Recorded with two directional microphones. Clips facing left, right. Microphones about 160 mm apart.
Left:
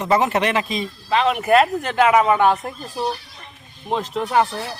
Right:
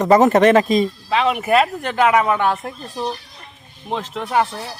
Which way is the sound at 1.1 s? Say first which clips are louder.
Left 1 dB; centre (ahead or behind).